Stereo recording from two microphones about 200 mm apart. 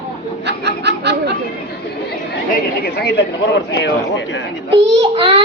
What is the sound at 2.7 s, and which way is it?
A man's voice, 50° left (ahead or behind).